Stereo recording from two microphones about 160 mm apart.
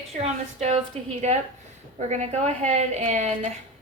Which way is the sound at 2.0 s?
45° right (ahead or behind).